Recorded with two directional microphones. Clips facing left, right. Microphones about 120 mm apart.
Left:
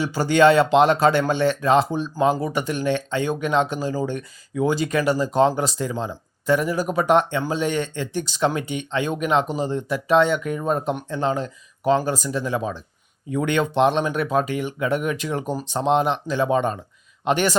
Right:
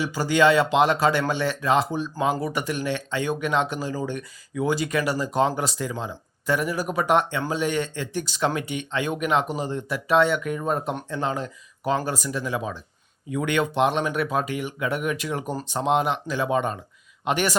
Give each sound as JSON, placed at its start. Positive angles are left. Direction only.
{"t": 0.0, "sound": "speech", "side_deg": 30}